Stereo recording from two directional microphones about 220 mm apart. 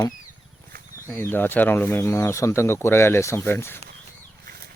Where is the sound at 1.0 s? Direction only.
10° left (ahead or behind).